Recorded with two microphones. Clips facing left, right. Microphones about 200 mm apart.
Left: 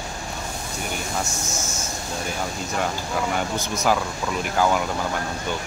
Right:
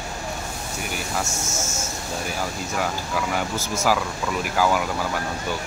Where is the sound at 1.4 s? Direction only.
25° right (ahead or behind).